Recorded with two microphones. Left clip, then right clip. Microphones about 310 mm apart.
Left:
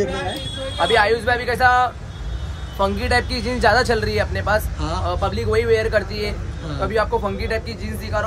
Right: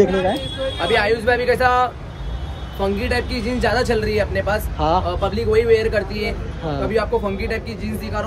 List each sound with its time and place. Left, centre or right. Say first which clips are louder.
0.7 s speech: left 2 dB; centre